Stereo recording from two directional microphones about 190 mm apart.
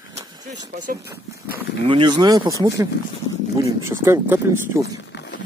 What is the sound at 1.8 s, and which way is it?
Speech, 25° right (ahead or behind).